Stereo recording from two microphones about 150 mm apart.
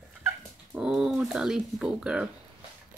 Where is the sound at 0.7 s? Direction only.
5° right (ahead or behind).